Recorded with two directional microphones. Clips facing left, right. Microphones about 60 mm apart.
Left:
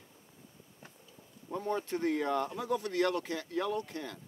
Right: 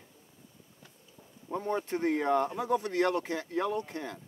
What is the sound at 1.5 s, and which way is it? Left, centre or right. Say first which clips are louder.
Speech: right 2 dB; right.